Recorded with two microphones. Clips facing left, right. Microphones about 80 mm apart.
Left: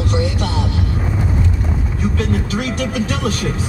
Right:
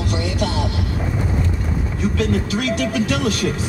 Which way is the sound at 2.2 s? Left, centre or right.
Left.